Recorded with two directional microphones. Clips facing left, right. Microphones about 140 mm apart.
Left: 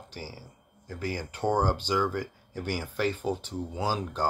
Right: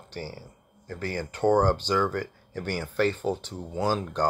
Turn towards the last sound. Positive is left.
turn(degrees=10)  # may be behind; listen again after turning